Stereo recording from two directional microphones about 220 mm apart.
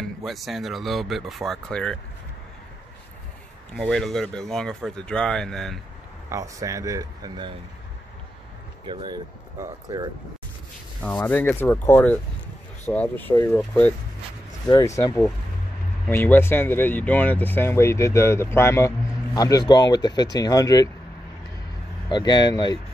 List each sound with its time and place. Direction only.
0.0 s speech: centre (ahead or behind)
3.7 s speech: centre (ahead or behind)
6.3 s speech: 15° right (ahead or behind)
8.8 s speech: 20° right (ahead or behind)
11.0 s speech: 5° left (ahead or behind)
22.1 s speech: 20° left (ahead or behind)